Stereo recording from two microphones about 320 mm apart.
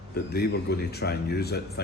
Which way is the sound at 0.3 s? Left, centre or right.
Left.